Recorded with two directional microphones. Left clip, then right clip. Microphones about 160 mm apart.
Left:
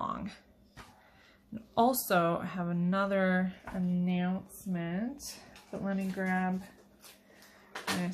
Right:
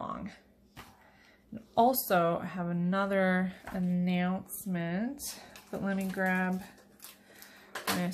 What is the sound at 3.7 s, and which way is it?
Speech, 20° right (ahead or behind).